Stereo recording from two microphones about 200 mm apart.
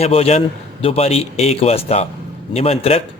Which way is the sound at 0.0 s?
30° left (ahead or behind).